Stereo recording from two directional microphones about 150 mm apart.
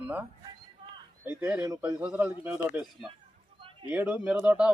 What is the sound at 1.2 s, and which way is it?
Speech, 15° right (ahead or behind).